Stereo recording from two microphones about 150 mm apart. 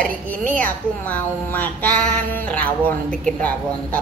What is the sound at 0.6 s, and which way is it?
Speech, 10° left (ahead or behind).